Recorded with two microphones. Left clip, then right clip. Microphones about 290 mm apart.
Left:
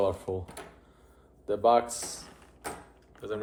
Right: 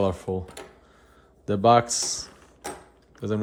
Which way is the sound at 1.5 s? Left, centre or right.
Right.